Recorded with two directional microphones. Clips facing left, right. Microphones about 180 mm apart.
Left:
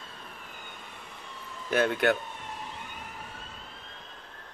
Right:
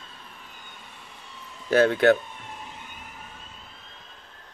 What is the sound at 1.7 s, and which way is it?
Speech, 35° right (ahead or behind).